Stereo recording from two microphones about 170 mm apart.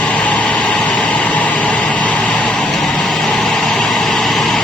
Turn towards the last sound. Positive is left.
turn(degrees=0)  # may be behind; listen again after turning